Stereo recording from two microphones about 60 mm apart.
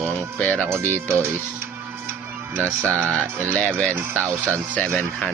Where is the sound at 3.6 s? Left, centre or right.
Centre.